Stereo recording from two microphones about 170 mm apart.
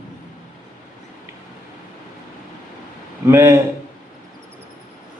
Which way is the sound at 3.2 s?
15° right (ahead or behind).